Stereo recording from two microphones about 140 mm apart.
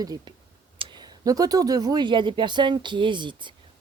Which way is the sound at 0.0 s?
25° right (ahead or behind).